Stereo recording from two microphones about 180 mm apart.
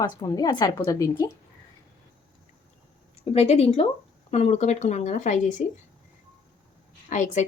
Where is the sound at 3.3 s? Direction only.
35° left (ahead or behind).